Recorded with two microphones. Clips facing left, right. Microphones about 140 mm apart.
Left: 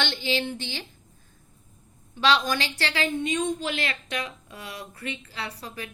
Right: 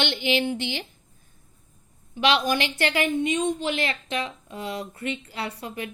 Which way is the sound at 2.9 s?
20° right (ahead or behind).